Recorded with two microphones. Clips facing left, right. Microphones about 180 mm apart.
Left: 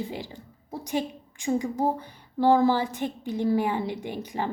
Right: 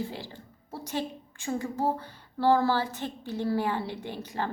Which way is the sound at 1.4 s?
15° left (ahead or behind).